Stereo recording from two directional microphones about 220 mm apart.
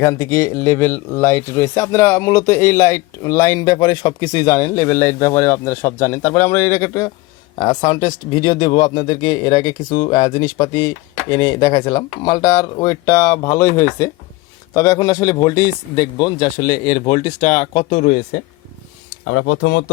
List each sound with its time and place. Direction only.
0.0 s speech: 15° left (ahead or behind); by 18.4 s 45° left (ahead or behind)
19.2 s speech: 70° left (ahead or behind)